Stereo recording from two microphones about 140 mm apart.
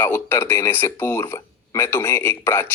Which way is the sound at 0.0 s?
15° left (ahead or behind).